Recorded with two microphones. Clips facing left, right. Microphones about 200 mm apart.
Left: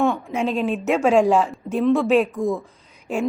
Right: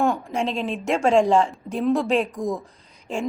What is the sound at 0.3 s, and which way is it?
A woman's voice, 5° left (ahead or behind).